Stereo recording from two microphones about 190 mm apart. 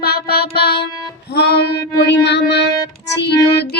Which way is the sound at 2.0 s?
65° left (ahead or behind).